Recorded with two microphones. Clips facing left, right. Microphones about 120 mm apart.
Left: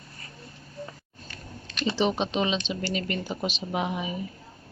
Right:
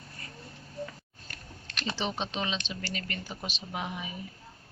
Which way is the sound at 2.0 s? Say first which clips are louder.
Left 8 dB; 15° left (ahead or behind).